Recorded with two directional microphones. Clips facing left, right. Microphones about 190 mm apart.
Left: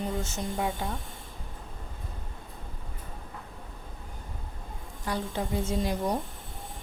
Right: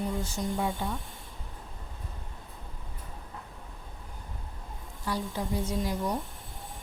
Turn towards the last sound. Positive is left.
turn(degrees=25)  # may be behind; listen again after turning